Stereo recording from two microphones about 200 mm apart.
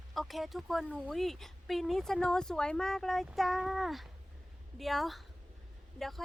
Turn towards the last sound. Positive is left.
turn(degrees=0)  # may be behind; listen again after turning